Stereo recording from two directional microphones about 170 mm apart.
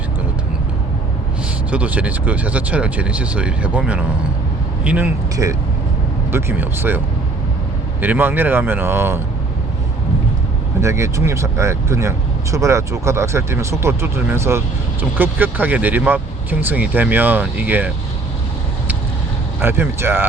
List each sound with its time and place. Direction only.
1.7 s speech: 10° right (ahead or behind)
8.0 s speech: 10° right (ahead or behind)
10.8 s speech: 15° right (ahead or behind)
19.6 s speech: 15° right (ahead or behind)